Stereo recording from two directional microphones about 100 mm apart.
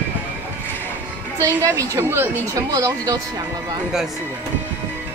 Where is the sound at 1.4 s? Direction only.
30° right (ahead or behind).